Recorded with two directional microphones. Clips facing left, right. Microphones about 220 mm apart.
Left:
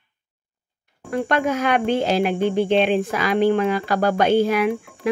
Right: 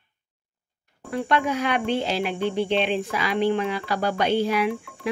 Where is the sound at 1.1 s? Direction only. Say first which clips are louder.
Left 3 dB; 45° left (ahead or behind).